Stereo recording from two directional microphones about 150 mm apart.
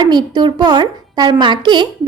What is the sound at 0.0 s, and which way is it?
A woman's voice, 30° right (ahead or behind).